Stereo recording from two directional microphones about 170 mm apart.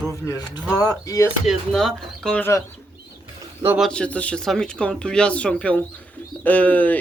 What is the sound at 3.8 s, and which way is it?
Speech, 5° left (ahead or behind).